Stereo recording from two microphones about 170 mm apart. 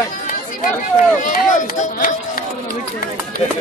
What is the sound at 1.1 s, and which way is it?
Speech, 50° left (ahead or behind).